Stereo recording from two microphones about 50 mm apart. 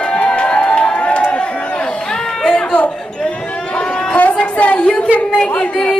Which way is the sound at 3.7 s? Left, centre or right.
Left.